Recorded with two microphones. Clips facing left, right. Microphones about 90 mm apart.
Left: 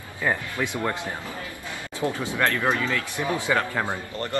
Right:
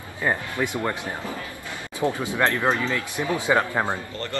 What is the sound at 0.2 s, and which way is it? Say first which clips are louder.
Speech: right 1 dB; 15° right (ahead or behind).